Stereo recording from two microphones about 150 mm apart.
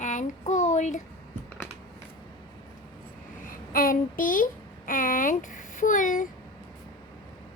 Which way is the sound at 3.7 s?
70° left (ahead or behind).